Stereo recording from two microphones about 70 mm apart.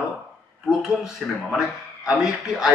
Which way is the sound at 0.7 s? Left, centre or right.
Centre.